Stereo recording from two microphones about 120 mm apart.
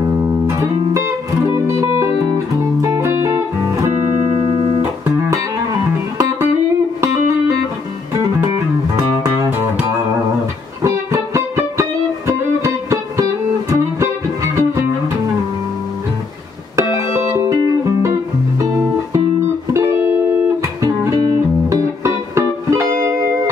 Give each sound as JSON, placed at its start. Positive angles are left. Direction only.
{"t": 2.8, "sound": "music", "side_deg": -25}
{"t": 10.8, "sound": "music", "side_deg": -25}
{"t": 16.9, "sound": "music", "side_deg": -25}
{"t": 21.6, "sound": "music", "side_deg": -25}